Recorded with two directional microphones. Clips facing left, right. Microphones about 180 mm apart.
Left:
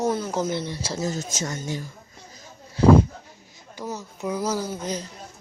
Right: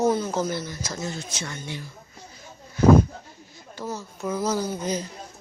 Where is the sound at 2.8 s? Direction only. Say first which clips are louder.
Left 1 dB; 30° left (ahead or behind).